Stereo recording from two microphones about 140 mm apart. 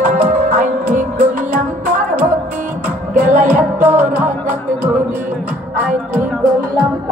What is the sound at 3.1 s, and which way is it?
Music, 70° right (ahead or behind).